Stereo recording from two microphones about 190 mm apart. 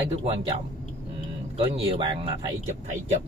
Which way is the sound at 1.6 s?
30° right (ahead or behind).